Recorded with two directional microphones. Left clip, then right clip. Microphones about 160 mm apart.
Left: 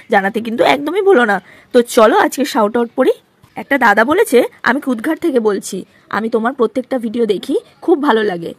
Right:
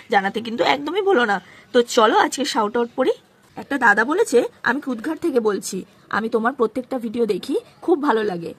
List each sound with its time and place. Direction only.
0.1 s a woman's voice: 35° left (ahead or behind)